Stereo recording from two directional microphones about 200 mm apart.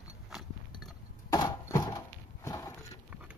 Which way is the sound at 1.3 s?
15° left (ahead or behind).